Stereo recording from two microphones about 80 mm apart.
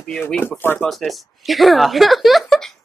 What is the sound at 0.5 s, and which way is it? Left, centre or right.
Speech, left.